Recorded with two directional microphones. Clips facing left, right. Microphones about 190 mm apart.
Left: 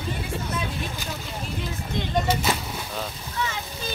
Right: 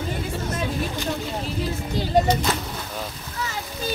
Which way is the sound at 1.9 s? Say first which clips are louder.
Right 5 dB; 35° right (ahead or behind).